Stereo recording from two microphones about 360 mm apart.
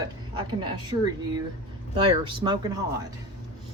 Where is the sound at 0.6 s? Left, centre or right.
Centre.